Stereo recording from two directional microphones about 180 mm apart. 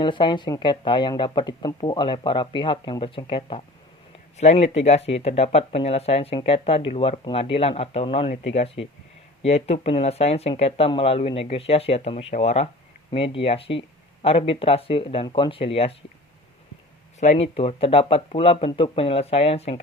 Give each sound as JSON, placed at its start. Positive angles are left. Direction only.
{"t": 0.0, "sound": "speech", "side_deg": 25}
{"t": 17.2, "sound": "speech", "side_deg": 35}